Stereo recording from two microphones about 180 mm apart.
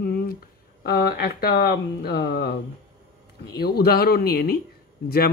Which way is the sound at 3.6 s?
60° left (ahead or behind).